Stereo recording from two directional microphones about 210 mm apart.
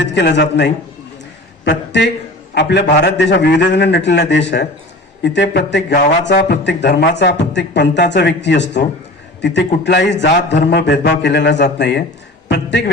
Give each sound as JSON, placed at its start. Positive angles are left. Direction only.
{"t": 0.0, "sound": "a man's voice", "side_deg": 55}